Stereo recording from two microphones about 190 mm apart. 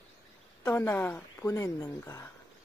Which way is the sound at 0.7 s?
10° left (ahead or behind).